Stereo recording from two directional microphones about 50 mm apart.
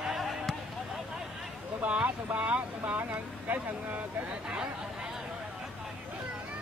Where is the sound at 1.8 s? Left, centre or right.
Right.